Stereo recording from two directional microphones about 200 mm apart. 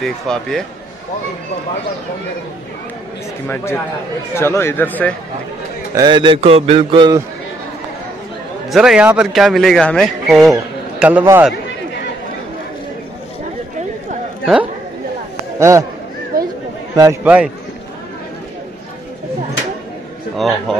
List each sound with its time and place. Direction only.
0.0 s a man's voice: centre (ahead or behind)
3.4 s speech: 10° left (ahead or behind)
5.9 s a man's voice: 25° right (ahead or behind)
8.6 s a man's voice: 5° right (ahead or behind)
14.4 s speech: 5° right (ahead or behind)
16.3 s chatter: 45° right (ahead or behind)
16.9 s a man's voice: 15° right (ahead or behind)
20.3 s a man's voice: centre (ahead or behind)